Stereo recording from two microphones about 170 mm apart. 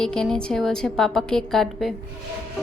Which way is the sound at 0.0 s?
5° left (ahead or behind).